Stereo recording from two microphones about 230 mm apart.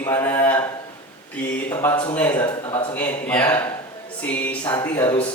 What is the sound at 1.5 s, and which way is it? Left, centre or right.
Speech, centre.